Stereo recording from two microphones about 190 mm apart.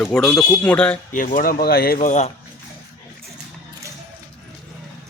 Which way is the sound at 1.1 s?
45° left (ahead or behind).